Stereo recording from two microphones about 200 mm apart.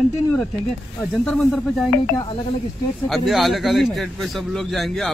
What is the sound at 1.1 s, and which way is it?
Speech, centre (ahead or behind).